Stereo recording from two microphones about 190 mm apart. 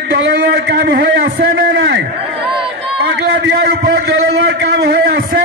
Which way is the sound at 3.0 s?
60° right (ahead or behind).